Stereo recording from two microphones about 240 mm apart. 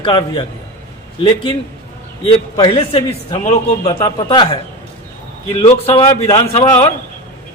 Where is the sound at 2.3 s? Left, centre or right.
Left.